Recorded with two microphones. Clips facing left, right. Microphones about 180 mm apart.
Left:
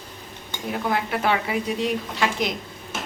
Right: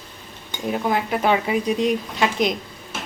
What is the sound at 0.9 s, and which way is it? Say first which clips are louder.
Speech: right 3 dB; 20° right (ahead or behind).